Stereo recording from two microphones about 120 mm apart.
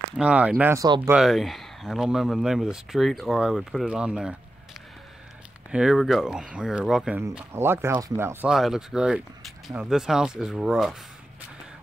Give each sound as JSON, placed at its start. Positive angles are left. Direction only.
{"t": 0.2, "sound": "speech", "side_deg": -10}
{"t": 0.7, "sound": "speech", "side_deg": -35}
{"t": 1.1, "sound": "speech", "side_deg": 0}
{"t": 5.7, "sound": "speech", "side_deg": -5}
{"t": 7.5, "sound": "speech", "side_deg": -20}
{"t": 8.5, "sound": "speech", "side_deg": -5}